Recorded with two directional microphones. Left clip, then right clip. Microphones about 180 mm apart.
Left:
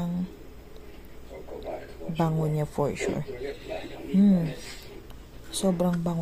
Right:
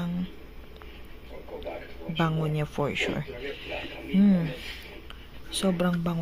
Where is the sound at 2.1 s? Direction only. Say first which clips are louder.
Even; 10° right (ahead or behind).